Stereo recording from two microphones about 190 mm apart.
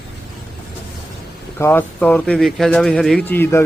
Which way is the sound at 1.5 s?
10° left (ahead or behind).